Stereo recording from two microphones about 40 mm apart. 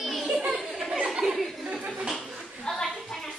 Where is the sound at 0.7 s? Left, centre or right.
Centre.